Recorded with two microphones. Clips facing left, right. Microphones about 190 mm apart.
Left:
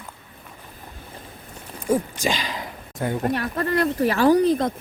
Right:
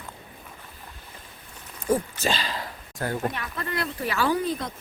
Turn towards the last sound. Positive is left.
turn(degrees=45)  # may be behind; listen again after turning